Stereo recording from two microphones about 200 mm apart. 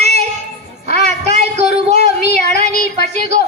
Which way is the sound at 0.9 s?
35° right (ahead or behind).